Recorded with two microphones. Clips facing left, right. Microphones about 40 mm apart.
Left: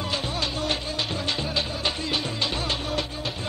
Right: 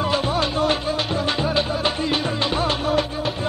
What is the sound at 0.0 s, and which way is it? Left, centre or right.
Music, centre.